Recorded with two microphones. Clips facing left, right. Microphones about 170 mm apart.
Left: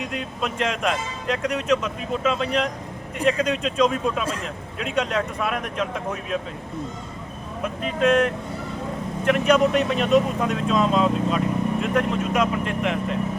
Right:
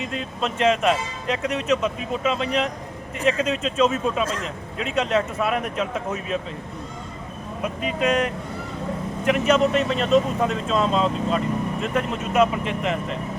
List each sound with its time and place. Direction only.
0.0 s speech: centre (ahead or behind)
7.8 s speech: 5° right (ahead or behind)